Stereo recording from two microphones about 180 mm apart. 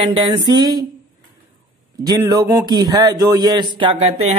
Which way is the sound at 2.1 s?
20° right (ahead or behind).